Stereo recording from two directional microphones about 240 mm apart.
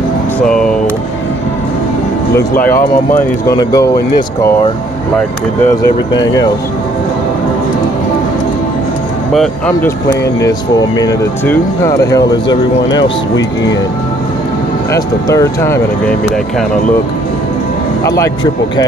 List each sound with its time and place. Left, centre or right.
0.4 s a sound: centre
2.3 s speech: centre
2.7 s speech: left
3.2 s speech: centre
5.7 s speech: centre
9.3 s speech: centre
14.9 s speech: centre
18.0 s speech: centre